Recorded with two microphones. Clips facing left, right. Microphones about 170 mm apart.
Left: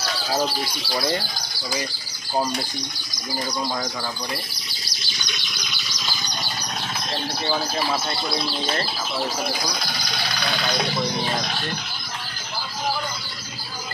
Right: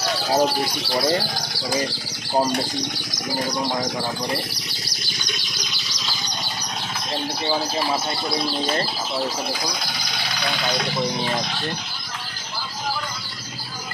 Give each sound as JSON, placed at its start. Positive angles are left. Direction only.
{"t": 0.1, "sound": "speech", "side_deg": -20}
{"t": 1.2, "sound": "speech", "side_deg": -75}
{"t": 2.8, "sound": "speech", "side_deg": -90}
{"t": 3.7, "sound": "speech", "side_deg": -25}
{"t": 4.6, "sound": "bird", "side_deg": -65}
{"t": 7.1, "sound": "speech", "side_deg": -15}